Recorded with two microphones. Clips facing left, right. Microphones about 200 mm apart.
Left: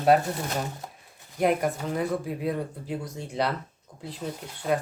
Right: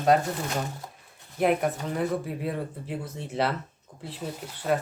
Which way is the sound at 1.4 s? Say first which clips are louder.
Even; centre (ahead or behind).